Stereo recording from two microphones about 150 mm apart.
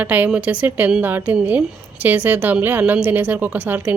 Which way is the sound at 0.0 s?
10° right (ahead or behind).